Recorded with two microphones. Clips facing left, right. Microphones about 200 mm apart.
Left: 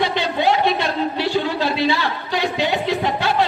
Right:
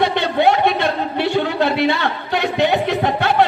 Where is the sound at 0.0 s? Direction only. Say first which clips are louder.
Right 4 dB; 60° right (ahead or behind).